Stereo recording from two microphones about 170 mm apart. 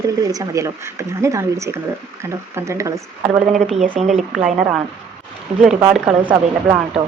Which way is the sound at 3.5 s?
Centre (ahead or behind).